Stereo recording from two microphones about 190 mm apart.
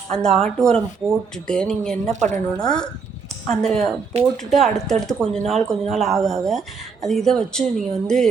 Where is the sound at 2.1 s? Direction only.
40° right (ahead or behind).